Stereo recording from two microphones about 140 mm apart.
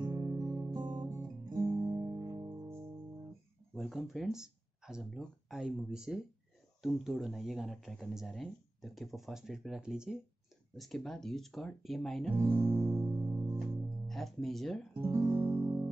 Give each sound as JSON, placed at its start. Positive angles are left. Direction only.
{"t": 0.0, "sound": "music", "side_deg": -30}
{"t": 0.9, "sound": "guitar", "side_deg": -25}
{"t": 3.7, "sound": "speech", "side_deg": 0}
{"t": 13.0, "sound": "music", "side_deg": -30}
{"t": 14.0, "sound": "speech", "side_deg": 0}
{"t": 15.0, "sound": "guitar", "side_deg": -20}
{"t": 15.2, "sound": "guitar", "side_deg": -35}